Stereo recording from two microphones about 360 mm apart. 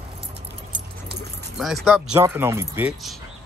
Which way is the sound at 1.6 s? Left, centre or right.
Centre.